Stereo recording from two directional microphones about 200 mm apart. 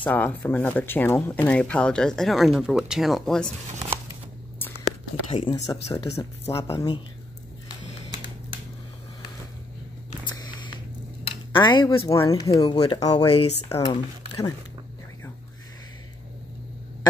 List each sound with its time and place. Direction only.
0.0 s speech: 10° left (ahead or behind)
5.3 s speech: 25° left (ahead or behind)
10.2 s a sound: 20° left (ahead or behind)
11.5 s speech: 25° left (ahead or behind)